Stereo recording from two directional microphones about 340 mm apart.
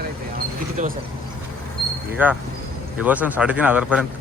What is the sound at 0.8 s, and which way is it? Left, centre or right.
Speech, right.